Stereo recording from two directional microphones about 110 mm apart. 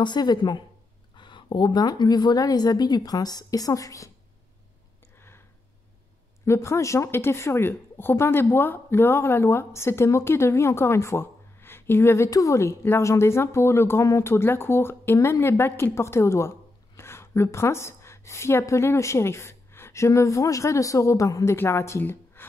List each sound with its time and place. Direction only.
0.0 s speech: 40° left (ahead or behind)
5.1 s a sound: 20° left (ahead or behind)
6.4 s a woman's voice: 25° left (ahead or behind)